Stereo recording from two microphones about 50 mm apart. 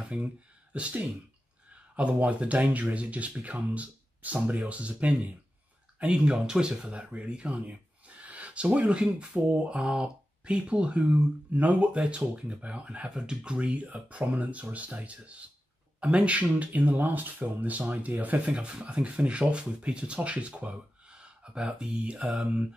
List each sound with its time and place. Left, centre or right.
0.1 s speech: centre
2.0 s speech: right
18.5 s speech: right